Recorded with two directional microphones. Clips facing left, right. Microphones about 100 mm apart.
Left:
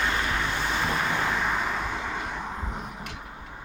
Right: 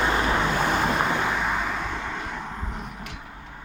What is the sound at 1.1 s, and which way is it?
Vehicle, 10° right (ahead or behind).